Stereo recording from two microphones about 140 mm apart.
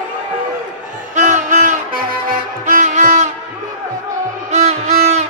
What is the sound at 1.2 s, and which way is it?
Music, 65° right (ahead or behind).